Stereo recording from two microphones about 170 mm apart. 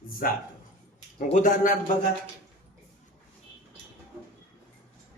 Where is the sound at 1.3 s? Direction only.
50° left (ahead or behind).